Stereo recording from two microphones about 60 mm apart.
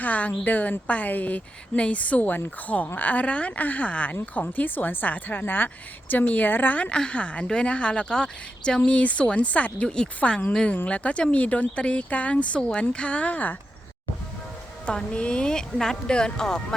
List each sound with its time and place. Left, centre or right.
0.0 s a woman's voice: left
14.8 s a woman's voice: centre